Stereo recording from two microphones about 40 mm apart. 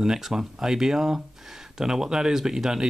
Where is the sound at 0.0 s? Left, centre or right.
Centre.